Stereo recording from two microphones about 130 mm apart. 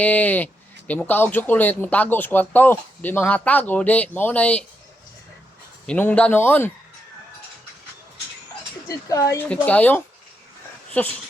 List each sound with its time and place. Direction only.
0.0 s speech: 10° left (ahead or behind)
5.8 s speech: 10° left (ahead or behind)
8.9 s speech: 25° left (ahead or behind)
9.5 s speech: 10° left (ahead or behind)